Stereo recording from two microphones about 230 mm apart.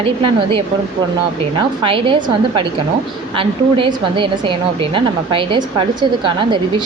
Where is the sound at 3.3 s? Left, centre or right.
Right.